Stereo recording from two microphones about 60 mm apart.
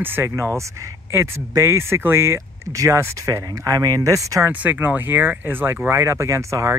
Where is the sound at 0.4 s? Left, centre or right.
Right.